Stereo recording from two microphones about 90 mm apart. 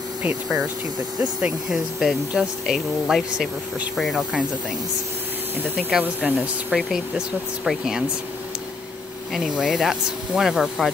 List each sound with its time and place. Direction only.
0.2 s speech: 15° right (ahead or behind)
1.4 s speech: 5° right (ahead or behind)
5.8 s speech: 5° right (ahead or behind)
6.2 s speech: 15° right (ahead or behind)
6.9 s speech: 5° right (ahead or behind)
9.3 s speech: 5° right (ahead or behind)